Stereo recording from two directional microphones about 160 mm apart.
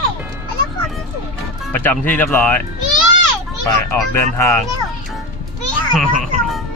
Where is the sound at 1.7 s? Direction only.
10° left (ahead or behind).